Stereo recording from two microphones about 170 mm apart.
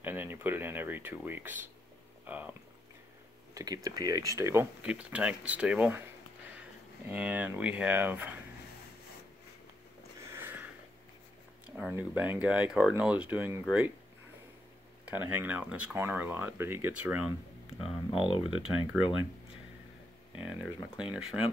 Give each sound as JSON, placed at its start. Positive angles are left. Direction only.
{"t": 0.0, "sound": "speech", "side_deg": -10}
{"t": 3.5, "sound": "speech", "side_deg": -20}
{"t": 7.1, "sound": "speech", "side_deg": -10}
{"t": 10.3, "sound": "a sound", "side_deg": -10}
{"t": 11.9, "sound": "speech", "side_deg": -10}
{"t": 15.0, "sound": "speech", "side_deg": -10}
{"t": 17.8, "sound": "speech", "side_deg": 30}
{"t": 21.0, "sound": "speech", "side_deg": -5}